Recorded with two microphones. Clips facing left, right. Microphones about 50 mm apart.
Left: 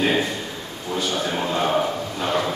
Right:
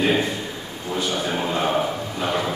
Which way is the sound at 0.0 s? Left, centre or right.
Centre.